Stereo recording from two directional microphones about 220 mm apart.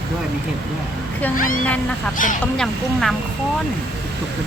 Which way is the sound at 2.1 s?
35° left (ahead or behind).